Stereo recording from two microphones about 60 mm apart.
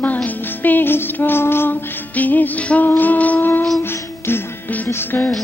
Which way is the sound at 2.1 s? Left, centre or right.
Left.